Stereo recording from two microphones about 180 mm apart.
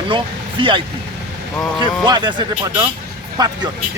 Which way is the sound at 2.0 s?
25° right (ahead or behind).